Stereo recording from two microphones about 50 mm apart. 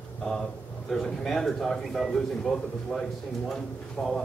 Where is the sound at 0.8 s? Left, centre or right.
Centre.